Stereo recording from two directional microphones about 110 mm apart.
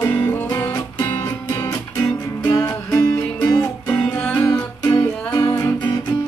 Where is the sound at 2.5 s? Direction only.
25° left (ahead or behind).